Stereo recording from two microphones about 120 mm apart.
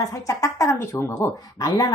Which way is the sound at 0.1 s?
25° left (ahead or behind).